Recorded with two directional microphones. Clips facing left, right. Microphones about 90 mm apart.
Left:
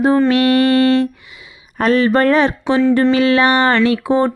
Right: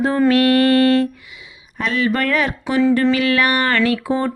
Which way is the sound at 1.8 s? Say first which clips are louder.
Left 6 dB; 40° left (ahead or behind).